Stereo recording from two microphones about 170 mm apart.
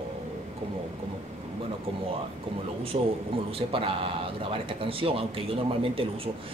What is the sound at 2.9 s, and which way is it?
Speech, 35° right (ahead or behind).